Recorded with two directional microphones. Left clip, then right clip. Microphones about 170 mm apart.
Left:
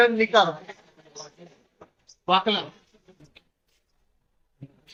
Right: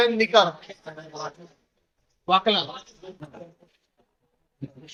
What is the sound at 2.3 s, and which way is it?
Speech, 40° right (ahead or behind).